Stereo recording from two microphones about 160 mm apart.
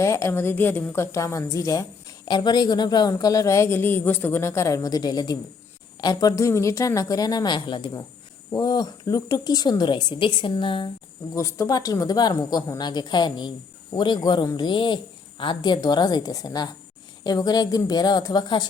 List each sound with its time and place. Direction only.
0.0 s a woman's voice: 15° left (ahead or behind)
11.3 s a woman's voice: 20° left (ahead or behind)